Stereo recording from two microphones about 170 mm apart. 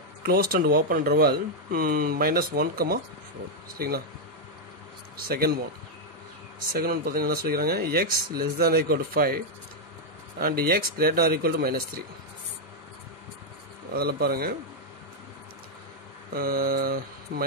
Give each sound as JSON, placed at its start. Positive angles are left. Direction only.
{"t": 0.2, "sound": "speech", "side_deg": -60}
{"t": 5.1, "sound": "speech", "side_deg": -60}
{"t": 6.7, "sound": "speech", "side_deg": -60}
{"t": 10.4, "sound": "speech", "side_deg": -60}
{"t": 13.9, "sound": "speech", "side_deg": -65}
{"t": 16.3, "sound": "speech", "side_deg": -60}